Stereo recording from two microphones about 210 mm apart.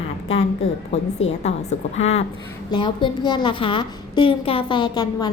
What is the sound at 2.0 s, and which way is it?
A woman's voice, 30° left (ahead or behind).